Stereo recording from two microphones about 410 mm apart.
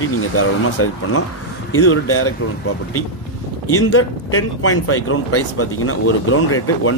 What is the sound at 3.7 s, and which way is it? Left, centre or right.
Speech, left.